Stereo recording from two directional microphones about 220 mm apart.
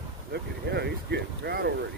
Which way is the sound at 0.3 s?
50° right (ahead or behind).